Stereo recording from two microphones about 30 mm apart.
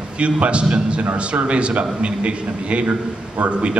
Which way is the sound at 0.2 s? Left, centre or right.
Right.